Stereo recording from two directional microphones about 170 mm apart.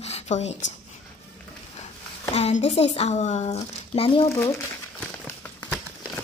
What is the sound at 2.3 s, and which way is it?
A woman's voice, 40° left (ahead or behind).